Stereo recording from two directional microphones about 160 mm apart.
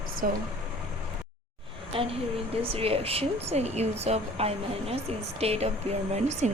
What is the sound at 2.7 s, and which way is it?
A woman's voice, 40° right (ahead or behind).